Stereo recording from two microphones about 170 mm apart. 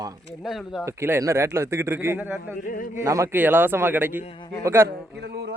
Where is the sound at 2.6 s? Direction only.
55° left (ahead or behind).